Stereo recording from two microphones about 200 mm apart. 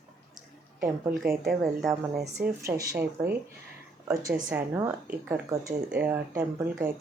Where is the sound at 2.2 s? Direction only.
35° right (ahead or behind).